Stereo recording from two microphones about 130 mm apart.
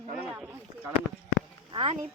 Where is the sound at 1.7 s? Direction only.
45° right (ahead or behind).